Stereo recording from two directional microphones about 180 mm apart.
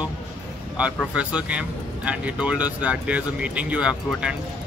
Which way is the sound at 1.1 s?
5° right (ahead or behind).